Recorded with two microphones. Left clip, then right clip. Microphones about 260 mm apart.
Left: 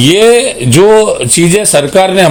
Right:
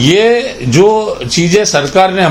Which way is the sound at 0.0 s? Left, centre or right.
Left.